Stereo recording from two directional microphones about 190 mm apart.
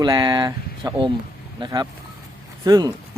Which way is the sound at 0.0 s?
25° right (ahead or behind).